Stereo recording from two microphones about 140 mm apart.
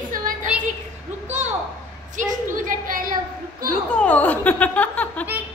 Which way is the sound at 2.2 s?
65° right (ahead or behind).